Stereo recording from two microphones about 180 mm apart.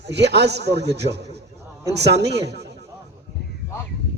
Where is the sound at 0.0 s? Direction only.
70° right (ahead or behind).